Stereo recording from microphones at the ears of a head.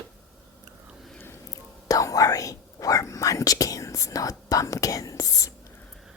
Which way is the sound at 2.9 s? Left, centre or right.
Left.